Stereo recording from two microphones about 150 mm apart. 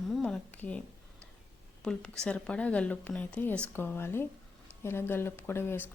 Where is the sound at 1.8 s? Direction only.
5° left (ahead or behind).